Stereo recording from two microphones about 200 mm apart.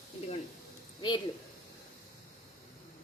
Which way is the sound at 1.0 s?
20° left (ahead or behind).